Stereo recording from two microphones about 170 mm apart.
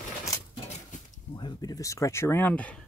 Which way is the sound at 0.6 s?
45° left (ahead or behind).